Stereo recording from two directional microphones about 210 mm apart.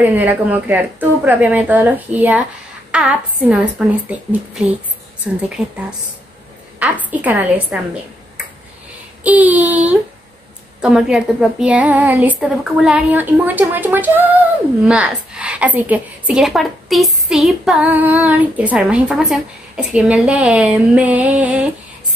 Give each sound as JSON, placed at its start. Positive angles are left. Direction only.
{"t": 0.0, "sound": "a woman's voice", "side_deg": -10}
{"t": 7.1, "sound": "speech", "side_deg": -10}
{"t": 9.2, "sound": "a woman's voice", "side_deg": -5}